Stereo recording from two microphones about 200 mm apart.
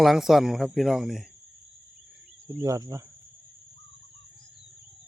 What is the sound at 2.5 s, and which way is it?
Speech, 15° right (ahead or behind).